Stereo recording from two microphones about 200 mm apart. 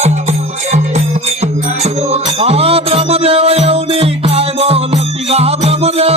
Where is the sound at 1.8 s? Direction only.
30° right (ahead or behind).